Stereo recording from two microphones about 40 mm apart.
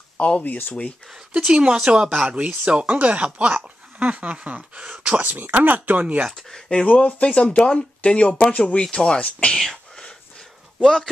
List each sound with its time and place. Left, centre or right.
0.2 s speech: left
1.1 s speech: centre
1.5 s speech: right
6.0 s speech: right
6.5 s speech: left
6.9 s speech: left
8.3 s speech: centre
10.8 s a man's voice: centre